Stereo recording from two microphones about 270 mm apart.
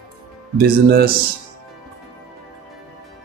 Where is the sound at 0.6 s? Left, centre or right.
Right.